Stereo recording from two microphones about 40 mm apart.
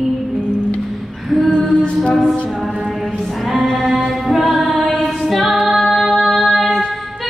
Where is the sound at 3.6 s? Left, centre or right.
Centre.